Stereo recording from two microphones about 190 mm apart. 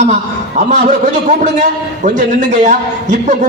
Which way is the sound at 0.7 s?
40° right (ahead or behind).